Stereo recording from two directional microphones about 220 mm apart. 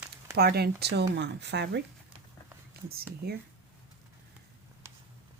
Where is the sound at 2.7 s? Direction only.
45° right (ahead or behind).